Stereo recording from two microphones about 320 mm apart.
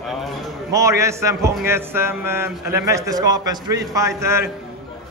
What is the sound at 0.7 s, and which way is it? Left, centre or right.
A man's voice, centre.